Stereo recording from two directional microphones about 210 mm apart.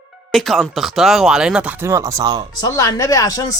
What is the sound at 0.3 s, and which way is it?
Speech, centre (ahead or behind).